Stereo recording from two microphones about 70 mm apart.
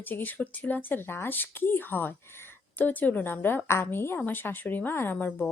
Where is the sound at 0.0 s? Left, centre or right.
Left.